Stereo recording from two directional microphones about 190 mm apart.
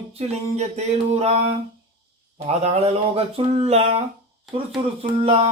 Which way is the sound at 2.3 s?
35° right (ahead or behind).